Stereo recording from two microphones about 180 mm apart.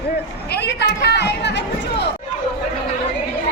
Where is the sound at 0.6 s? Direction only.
70° left (ahead or behind).